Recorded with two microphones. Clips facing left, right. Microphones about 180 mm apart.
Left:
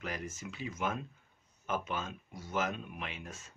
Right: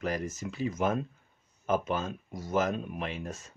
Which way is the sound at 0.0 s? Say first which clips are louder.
Right 8 dB; 40° right (ahead or behind).